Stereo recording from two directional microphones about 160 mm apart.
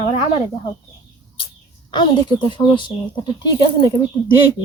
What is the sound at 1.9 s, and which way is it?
Speech, 30° left (ahead or behind).